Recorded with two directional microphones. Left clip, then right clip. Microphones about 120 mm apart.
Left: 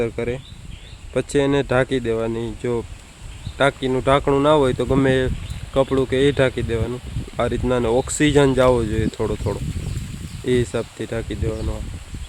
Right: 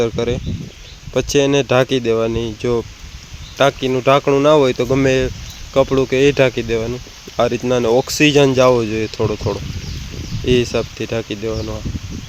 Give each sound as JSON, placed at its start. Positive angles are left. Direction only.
{"t": 0.0, "sound": "speech", "side_deg": -25}